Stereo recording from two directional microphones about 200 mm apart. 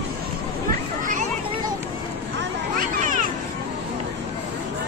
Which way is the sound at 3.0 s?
40° right (ahead or behind).